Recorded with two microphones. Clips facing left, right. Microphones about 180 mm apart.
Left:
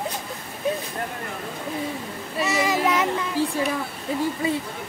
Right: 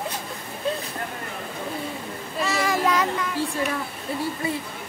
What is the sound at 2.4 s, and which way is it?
Child singing, 20° left (ahead or behind).